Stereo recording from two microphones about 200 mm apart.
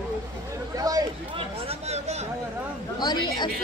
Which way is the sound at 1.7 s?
30° right (ahead or behind).